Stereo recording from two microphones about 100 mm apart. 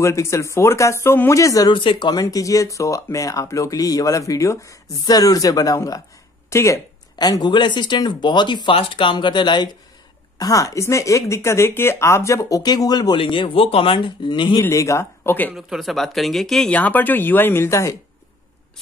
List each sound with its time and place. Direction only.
0.0 s speech: 30° left (ahead or behind)
1.4 s speech: 35° left (ahead or behind)
1.7 s speech: 55° left (ahead or behind)
2.2 s speech: 35° left (ahead or behind)
7.2 s speech: 40° left (ahead or behind)
10.4 s speech: 35° left (ahead or behind)
13.2 s speech: 60° left (ahead or behind)
14.6 s speech: 30° left (ahead or behind)
15.5 s speech: centre (ahead or behind)
16.7 s speech: 15° left (ahead or behind)